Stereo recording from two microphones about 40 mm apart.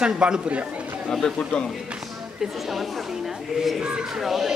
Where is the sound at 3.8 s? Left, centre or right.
Right.